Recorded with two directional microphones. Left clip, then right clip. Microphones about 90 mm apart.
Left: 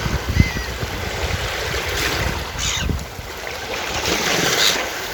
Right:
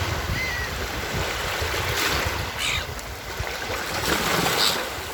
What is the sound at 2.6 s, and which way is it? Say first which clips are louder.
Boat: left 2 dB; 20° left (ahead or behind).